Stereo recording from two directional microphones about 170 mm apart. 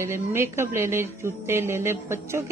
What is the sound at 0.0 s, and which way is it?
A woman's voice, 15° right (ahead or behind).